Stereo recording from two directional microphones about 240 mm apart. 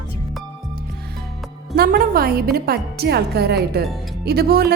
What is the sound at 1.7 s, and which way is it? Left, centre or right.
A woman's voice, right.